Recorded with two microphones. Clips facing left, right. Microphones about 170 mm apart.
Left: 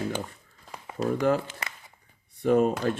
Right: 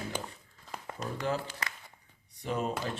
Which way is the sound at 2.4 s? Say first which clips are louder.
Left 11 dB; 50° left (ahead or behind).